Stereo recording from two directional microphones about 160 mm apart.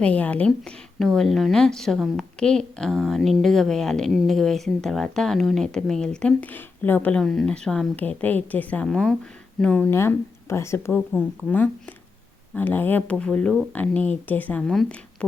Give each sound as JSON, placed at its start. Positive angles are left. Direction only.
{"t": 0.0, "sound": "a woman's voice", "side_deg": 10}